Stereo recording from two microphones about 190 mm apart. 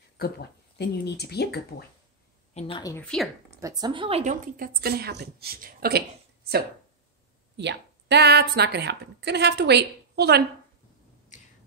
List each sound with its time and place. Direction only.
0.2 s speech: 60° left (ahead or behind)
2.8 s a woman's voice: 15° left (ahead or behind)
3.5 s a woman's voice: 20° right (ahead or behind); by 6.0 s 55° right (ahead or behind)
7.5 s a woman's voice: 65° right (ahead or behind)